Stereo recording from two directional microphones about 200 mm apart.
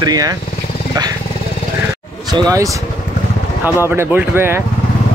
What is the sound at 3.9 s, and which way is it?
Speech, 10° right (ahead or behind).